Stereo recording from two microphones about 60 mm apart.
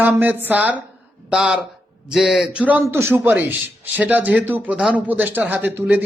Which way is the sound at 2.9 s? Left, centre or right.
Right.